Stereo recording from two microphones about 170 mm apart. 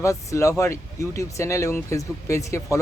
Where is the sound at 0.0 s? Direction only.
20° left (ahead or behind).